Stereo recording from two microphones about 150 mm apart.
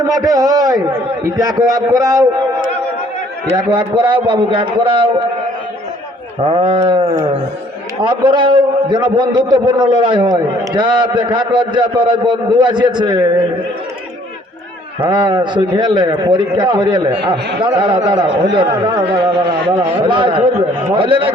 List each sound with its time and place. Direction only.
0.0 s a man's voice: 25° right (ahead or behind)
3.5 s a man's voice: 30° right (ahead or behind)
6.4 s a man's voice: 35° right (ahead or behind)
15.0 s a man's voice: 30° right (ahead or behind)